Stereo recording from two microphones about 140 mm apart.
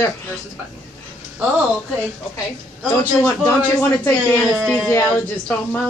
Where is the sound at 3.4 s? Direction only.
10° left (ahead or behind).